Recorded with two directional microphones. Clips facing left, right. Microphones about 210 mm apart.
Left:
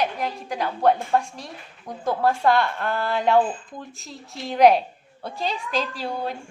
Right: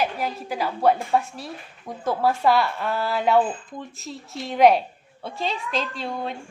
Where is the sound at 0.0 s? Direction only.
5° right (ahead or behind).